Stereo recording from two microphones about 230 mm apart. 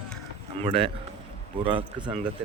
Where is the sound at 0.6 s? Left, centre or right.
Right.